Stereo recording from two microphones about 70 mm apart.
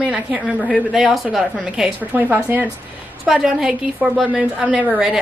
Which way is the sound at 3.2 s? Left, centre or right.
Centre.